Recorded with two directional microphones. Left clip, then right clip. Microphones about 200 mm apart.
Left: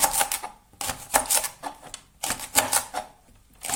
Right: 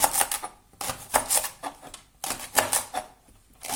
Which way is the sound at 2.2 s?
10° left (ahead or behind).